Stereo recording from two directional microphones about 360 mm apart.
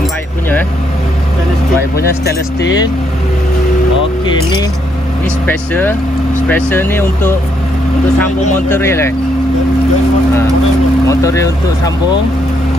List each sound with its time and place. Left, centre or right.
2.0 s speech: left
5.5 s speech: centre
8.6 s speech: centre
11.1 s vehicle: centre